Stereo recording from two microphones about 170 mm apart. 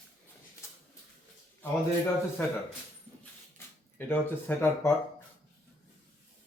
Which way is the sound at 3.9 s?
10° left (ahead or behind).